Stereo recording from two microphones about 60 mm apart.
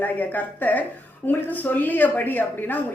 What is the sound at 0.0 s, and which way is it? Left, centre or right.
Speech, left.